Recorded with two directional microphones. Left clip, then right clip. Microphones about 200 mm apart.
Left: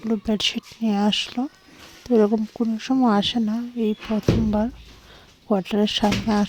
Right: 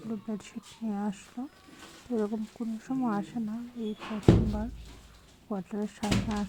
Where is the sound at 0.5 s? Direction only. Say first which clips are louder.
Left 12 dB; 60° left (ahead or behind).